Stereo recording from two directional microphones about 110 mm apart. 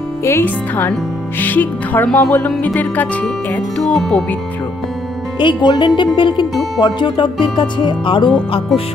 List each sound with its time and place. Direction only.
0.2 s speech: 20° left (ahead or behind)
2.0 s speech: 5° left (ahead or behind)
2.6 s speech: 15° left (ahead or behind)
5.4 s music: 45° left (ahead or behind)